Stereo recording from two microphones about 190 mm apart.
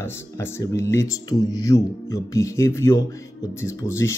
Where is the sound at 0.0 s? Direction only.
15° left (ahead or behind).